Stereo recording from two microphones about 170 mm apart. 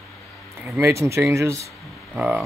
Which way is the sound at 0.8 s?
15° right (ahead or behind).